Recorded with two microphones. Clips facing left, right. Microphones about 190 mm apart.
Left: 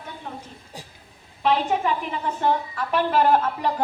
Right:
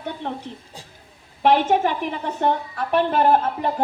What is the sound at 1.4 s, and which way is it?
Speech, 65° right (ahead or behind).